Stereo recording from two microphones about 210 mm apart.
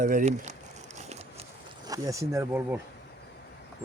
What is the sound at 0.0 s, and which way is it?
Speech, 40° right (ahead or behind).